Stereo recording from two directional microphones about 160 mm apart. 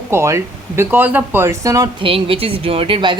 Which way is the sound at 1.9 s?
35° right (ahead or behind).